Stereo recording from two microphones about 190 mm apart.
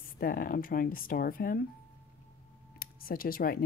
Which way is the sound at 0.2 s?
50° left (ahead or behind).